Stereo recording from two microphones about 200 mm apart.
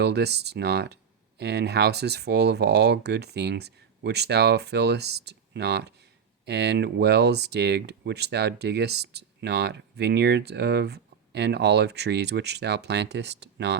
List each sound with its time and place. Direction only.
0.0 s speech: 55° right (ahead or behind)